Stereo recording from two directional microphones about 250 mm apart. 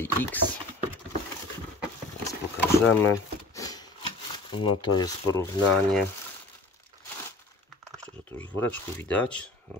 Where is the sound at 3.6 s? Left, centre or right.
Centre.